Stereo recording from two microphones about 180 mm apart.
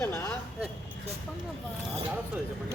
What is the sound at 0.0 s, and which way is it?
Speech, 15° left (ahead or behind).